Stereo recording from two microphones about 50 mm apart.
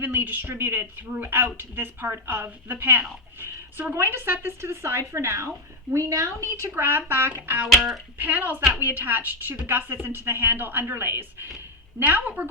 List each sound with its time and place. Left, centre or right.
0.0 s a woman's voice: right
6.6 s a woman's voice: right
7.7 s speech: centre
8.2 s a woman's voice: right